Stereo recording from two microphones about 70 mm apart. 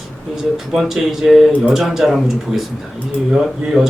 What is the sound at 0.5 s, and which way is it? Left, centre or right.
Speech, centre.